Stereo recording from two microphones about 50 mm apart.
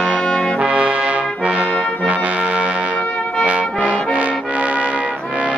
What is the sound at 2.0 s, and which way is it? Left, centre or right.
Music, right.